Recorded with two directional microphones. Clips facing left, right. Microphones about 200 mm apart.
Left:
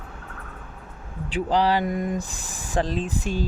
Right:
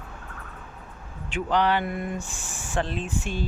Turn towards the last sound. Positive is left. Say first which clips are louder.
# left 3 dB
turn(degrees=40)  # may be behind; listen again after turning